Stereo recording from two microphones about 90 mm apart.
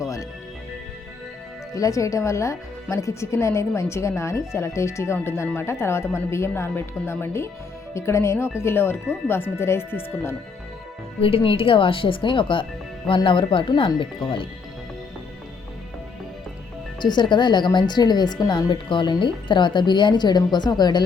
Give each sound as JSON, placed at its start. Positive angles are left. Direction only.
{"t": 0.0, "sound": "music", "side_deg": 35}
{"t": 1.7, "sound": "speech", "side_deg": 40}
{"t": 11.2, "sound": "speech", "side_deg": 90}
{"t": 17.0, "sound": "a woman's voice", "side_deg": 55}